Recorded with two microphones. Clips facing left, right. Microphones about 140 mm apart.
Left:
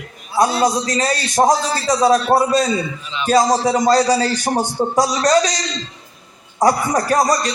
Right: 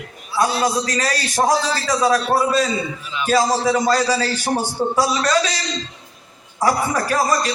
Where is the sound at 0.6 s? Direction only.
20° left (ahead or behind).